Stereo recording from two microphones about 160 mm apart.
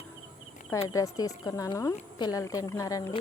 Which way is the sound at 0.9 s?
20° left (ahead or behind).